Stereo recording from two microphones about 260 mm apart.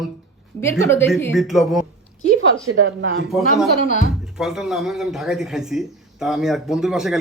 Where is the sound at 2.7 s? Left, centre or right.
Right.